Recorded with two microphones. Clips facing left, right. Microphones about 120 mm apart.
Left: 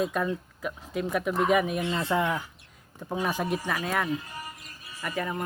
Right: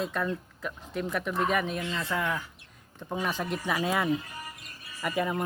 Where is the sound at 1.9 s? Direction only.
30° left (ahead or behind).